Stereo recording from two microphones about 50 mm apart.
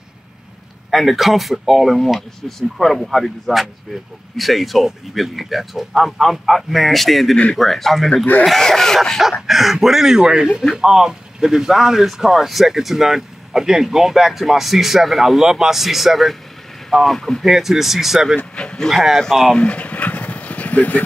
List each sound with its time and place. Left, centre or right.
0.8 s speech: centre
9.5 s speech: centre
17.5 s speech: centre
18.4 s a sound: left
18.9 s speech: centre
19.5 s a sound: left